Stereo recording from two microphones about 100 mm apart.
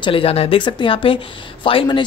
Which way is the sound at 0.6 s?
55° left (ahead or behind).